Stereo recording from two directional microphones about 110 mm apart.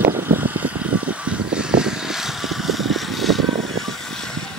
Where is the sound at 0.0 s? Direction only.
20° right (ahead or behind); by 4.3 s centre (ahead or behind).